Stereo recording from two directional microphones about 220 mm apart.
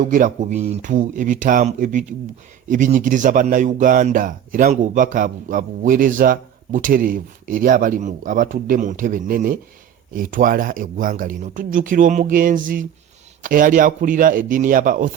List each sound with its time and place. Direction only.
0.0 s speech: 35° right (ahead or behind)